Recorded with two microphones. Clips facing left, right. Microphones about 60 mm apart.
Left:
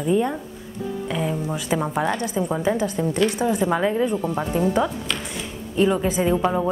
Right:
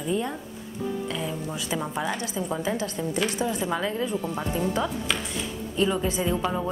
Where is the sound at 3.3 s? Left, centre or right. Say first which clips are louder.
Left 6 dB; left.